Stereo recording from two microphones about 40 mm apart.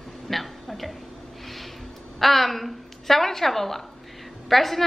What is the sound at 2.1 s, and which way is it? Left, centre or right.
A woman's voice, centre.